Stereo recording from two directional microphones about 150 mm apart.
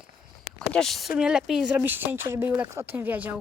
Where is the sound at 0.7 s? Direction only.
Centre (ahead or behind).